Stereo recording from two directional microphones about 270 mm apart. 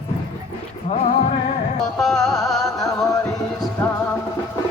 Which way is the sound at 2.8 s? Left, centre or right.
Centre.